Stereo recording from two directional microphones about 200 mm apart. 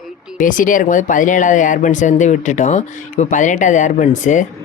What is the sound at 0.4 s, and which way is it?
Speech, 40° left (ahead or behind).